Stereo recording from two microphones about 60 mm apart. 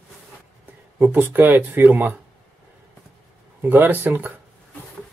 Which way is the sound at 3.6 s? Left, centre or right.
Right.